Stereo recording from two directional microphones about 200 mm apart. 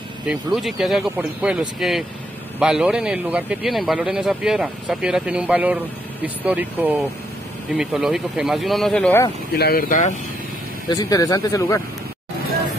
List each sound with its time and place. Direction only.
0.3 s speech: centre (ahead or behind)
9.5 s speech: 50° left (ahead or behind)
10.9 s speech: 15° left (ahead or behind)